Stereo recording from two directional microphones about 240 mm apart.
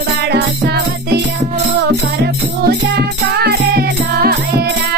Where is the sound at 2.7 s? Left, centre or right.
Right.